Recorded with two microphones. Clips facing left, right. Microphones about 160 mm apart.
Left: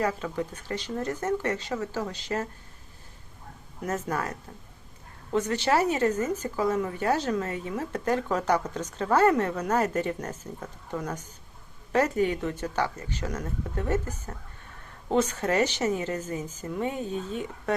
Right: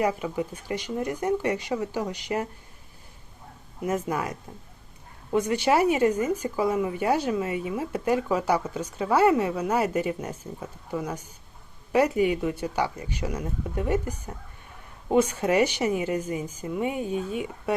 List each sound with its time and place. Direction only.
0.0 s speech: 15° right (ahead or behind)
3.8 s speech: 10° right (ahead or behind)